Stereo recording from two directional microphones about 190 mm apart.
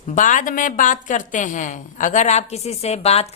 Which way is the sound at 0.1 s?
40° left (ahead or behind).